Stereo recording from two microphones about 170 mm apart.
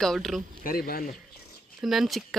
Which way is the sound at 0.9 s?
60° left (ahead or behind).